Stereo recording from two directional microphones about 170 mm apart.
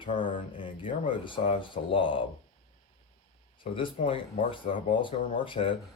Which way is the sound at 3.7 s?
30° left (ahead or behind).